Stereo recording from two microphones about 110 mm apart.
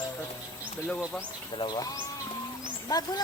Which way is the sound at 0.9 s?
5° left (ahead or behind).